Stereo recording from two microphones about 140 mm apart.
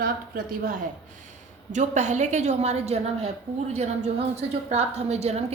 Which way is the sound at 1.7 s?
55° right (ahead or behind).